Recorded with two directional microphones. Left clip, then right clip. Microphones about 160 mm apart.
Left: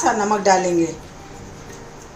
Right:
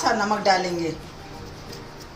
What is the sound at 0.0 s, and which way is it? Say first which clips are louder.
Speech: left 4 dB; 75° left (ahead or behind).